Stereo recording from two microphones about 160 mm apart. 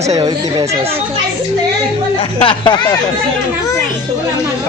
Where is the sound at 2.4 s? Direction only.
30° left (ahead or behind).